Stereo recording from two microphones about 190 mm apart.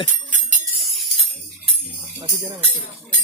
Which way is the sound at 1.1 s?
35° right (ahead or behind).